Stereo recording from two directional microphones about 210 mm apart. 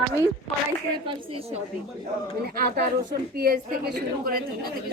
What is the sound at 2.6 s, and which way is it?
A woman's voice, 50° right (ahead or behind).